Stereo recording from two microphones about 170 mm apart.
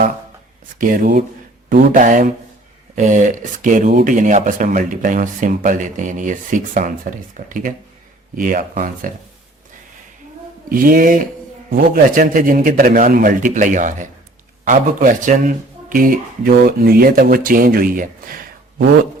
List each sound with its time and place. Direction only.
0.8 s speech: 55° right (ahead or behind)
10.7 s speech: 55° right (ahead or behind)